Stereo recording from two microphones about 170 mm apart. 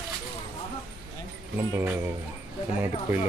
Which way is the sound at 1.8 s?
10° right (ahead or behind).